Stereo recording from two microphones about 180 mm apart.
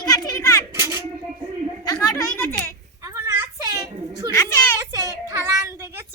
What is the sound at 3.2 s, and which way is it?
Children playing, 15° right (ahead or behind).